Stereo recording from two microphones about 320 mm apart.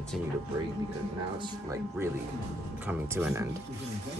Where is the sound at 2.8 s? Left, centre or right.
Centre.